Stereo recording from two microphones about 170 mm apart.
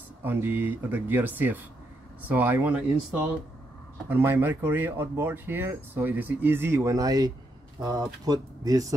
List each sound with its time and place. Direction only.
0.2 s speech: 10° right (ahead or behind)